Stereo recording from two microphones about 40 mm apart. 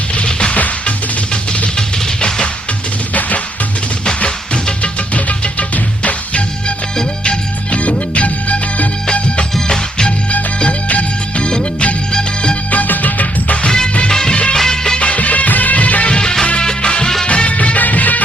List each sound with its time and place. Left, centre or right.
0.3 s music: left
0.5 s music: left
1.3 s music: left
3.1 s music: left
4.8 s music: left
9.6 s music: centre
10.8 s music: left
12.1 s music: left
12.7 s music: left
13.7 s music of bollywood: centre
14.9 s music: left
16.1 s music: centre
17.2 s music of bollywood: left